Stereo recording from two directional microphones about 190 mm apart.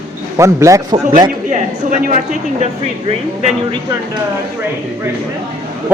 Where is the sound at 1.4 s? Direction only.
40° right (ahead or behind).